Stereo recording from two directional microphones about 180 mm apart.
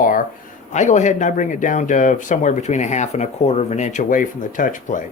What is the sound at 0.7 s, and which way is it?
Speech, 40° left (ahead or behind).